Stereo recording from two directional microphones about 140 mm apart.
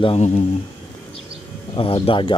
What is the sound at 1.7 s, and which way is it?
Speech, 40° left (ahead or behind).